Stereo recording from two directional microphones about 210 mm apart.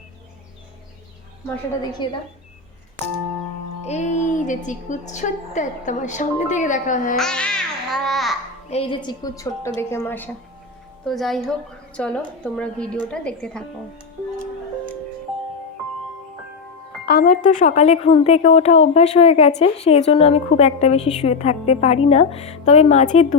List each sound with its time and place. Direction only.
2.0 s a woman's voice: 20° left (ahead or behind)
3.8 s a woman's voice: 35° left (ahead or behind)
7.2 s babbling: 5° left (ahead or behind)
8.7 s a woman's voice: 25° left (ahead or behind); by 13.7 s 5° left (ahead or behind)
17.1 s a woman's voice: 45° left (ahead or behind)